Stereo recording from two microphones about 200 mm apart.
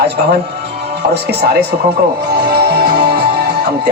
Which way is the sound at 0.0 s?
55° right (ahead or behind).